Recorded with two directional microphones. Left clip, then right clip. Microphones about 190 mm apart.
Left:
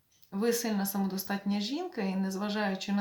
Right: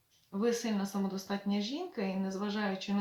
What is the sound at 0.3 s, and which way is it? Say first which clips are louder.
Speech: left 2 dB; 50° left (ahead or behind).